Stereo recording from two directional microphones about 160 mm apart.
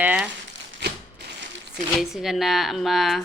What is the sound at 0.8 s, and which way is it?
Crushing, 90° right.